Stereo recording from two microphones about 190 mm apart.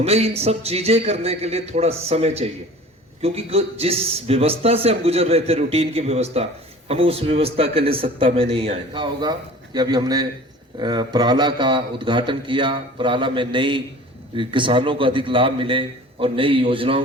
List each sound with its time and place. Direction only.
0.0 s a man's voice: 30° right (ahead or behind)